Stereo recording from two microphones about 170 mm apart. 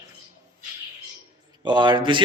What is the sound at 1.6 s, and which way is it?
Speech, 25° right (ahead or behind).